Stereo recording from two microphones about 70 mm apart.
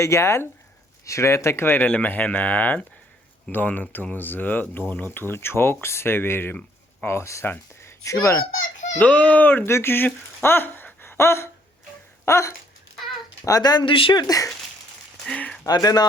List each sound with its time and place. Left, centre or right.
0.0 s speech: left
9.0 s speech: centre
9.6 s speech: left
12.2 s a sound: left
13.6 s speech: left
15.4 s speech: centre
15.6 s speech: left